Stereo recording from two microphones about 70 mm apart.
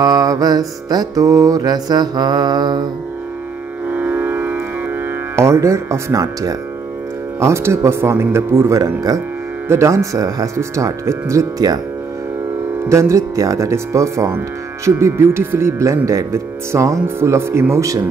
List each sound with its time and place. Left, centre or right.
0.0 s music: right
3.9 s music: right
5.3 s speech: right
7.3 s speech: right
12.8 s speech: right